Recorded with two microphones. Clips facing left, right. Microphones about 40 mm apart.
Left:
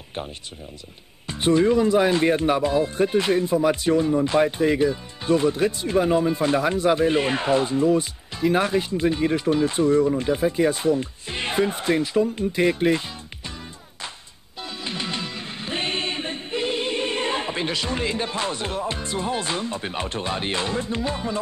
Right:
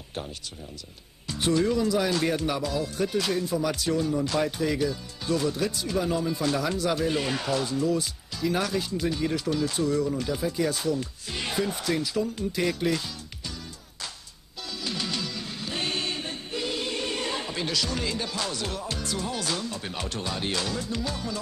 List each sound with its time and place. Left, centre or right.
1.2 s speech: left
14.8 s music: left